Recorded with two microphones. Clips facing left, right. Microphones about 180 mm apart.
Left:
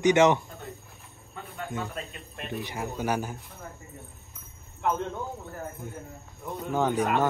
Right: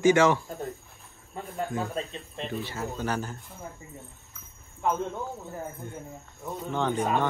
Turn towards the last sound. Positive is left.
turn(degrees=5)  # may be behind; listen again after turning